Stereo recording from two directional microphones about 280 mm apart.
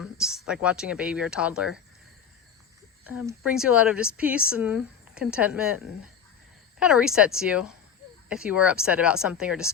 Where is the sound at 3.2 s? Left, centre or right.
Centre.